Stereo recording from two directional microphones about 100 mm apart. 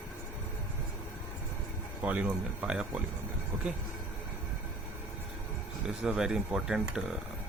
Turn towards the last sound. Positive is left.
turn(degrees=-5)  # may be behind; listen again after turning